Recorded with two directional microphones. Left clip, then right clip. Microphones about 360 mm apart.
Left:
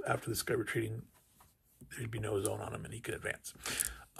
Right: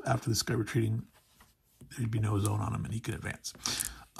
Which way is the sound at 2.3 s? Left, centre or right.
Right.